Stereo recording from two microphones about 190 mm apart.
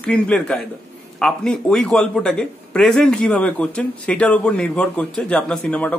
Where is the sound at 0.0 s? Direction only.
5° left (ahead or behind).